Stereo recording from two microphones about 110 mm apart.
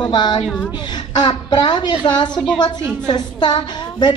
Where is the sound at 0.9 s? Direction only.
40° left (ahead or behind).